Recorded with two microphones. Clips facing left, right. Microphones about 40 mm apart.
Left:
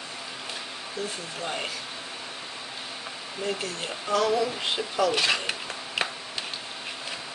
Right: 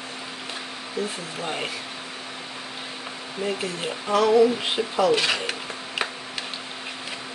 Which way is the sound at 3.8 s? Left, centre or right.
Centre.